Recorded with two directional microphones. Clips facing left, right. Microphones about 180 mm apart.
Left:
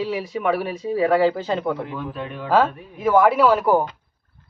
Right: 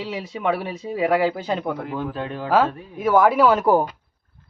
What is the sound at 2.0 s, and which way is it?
Speech, 30° right (ahead or behind).